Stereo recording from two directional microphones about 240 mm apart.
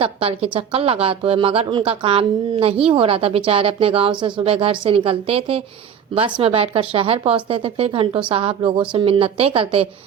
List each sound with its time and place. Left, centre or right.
0.0 s a woman's voice: right